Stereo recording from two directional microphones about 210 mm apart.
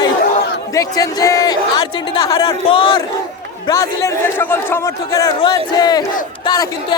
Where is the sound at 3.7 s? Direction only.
10° left (ahead or behind).